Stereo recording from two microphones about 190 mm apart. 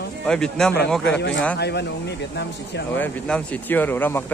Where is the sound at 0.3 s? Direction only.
5° left (ahead or behind).